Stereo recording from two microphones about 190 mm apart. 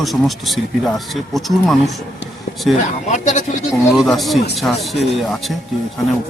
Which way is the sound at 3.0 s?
40° left (ahead or behind).